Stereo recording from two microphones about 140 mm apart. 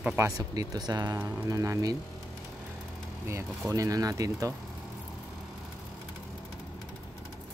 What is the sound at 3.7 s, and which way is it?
Speech, 25° right (ahead or behind).